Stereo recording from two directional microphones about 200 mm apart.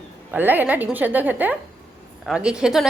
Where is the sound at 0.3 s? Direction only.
10° right (ahead or behind).